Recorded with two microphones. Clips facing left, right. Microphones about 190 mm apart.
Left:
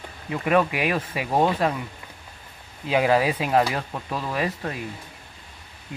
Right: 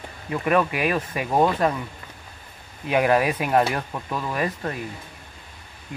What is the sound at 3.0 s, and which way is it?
Speech, 20° left (ahead or behind).